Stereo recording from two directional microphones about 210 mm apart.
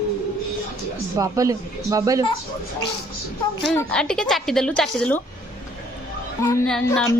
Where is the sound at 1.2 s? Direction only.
15° right (ahead or behind).